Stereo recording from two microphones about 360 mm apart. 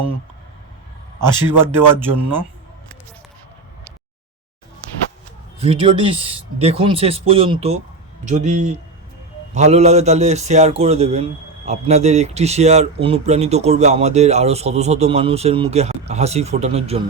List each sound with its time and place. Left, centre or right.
1.6 s a man's voice: centre
5.5 s a man's voice: centre